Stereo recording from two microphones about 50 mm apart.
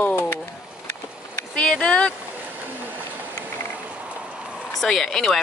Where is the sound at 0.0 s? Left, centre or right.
Left.